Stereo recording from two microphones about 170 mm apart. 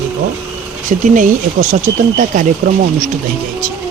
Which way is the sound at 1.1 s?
45° right (ahead or behind).